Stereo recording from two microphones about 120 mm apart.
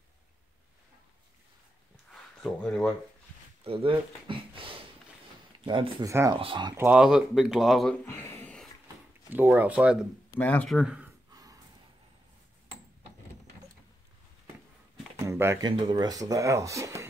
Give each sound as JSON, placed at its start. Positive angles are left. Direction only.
{"t": 2.0, "sound": "a sound", "side_deg": 0}
{"t": 3.6, "sound": "speech", "side_deg": -50}
{"t": 4.3, "sound": "a sound", "side_deg": -45}
{"t": 5.7, "sound": "speech", "side_deg": -40}
{"t": 6.8, "sound": "speech", "side_deg": -10}
{"t": 7.9, "sound": "speech", "side_deg": 20}
{"t": 9.3, "sound": "speech", "side_deg": -15}
{"t": 10.3, "sound": "speech", "side_deg": 15}
{"t": 10.7, "sound": "speech", "side_deg": -5}
{"t": 11.3, "sound": "a sound", "side_deg": -30}
{"t": 15.1, "sound": "a sound", "side_deg": -20}
{"t": 15.6, "sound": "speech", "side_deg": -40}